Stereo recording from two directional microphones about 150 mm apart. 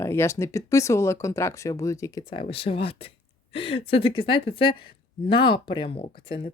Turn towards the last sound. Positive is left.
turn(degrees=35)  # may be behind; listen again after turning